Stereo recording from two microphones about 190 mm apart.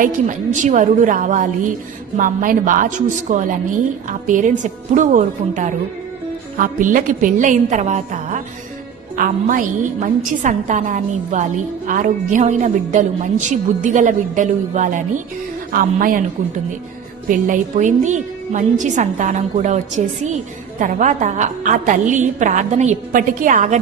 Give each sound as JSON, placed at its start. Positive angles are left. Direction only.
{"t": 0.6, "sound": "a woman's voice", "side_deg": -40}
{"t": 17.3, "sound": "a woman's voice", "side_deg": -40}
{"t": 20.8, "sound": "a woman's voice", "side_deg": -40}